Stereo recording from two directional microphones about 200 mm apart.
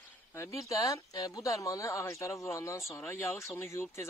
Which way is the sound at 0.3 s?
15° left (ahead or behind).